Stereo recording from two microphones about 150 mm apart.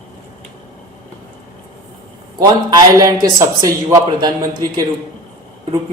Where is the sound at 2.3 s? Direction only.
25° right (ahead or behind).